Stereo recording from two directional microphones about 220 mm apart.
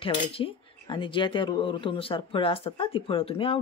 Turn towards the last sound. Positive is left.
turn(degrees=25)  # may be behind; listen again after turning